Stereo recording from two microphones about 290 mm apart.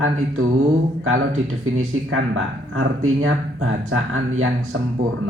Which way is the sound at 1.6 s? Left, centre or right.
Right.